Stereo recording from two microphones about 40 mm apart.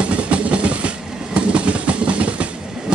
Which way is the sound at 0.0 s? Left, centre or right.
Right.